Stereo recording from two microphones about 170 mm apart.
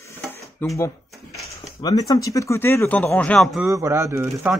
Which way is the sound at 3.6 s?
15° right (ahead or behind).